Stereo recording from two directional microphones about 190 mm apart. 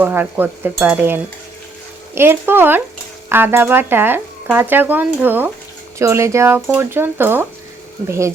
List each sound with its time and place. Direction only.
0.0 s speech: 10° right (ahead or behind)